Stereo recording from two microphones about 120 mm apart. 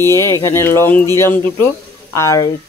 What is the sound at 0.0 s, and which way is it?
Speech, 25° left (ahead or behind).